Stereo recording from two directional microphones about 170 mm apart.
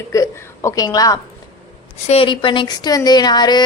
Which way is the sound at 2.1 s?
30° left (ahead or behind).